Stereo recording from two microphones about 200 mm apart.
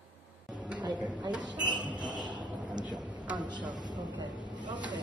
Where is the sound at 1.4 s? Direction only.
20° right (ahead or behind).